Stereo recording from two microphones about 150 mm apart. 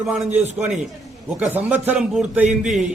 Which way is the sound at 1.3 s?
10° right (ahead or behind).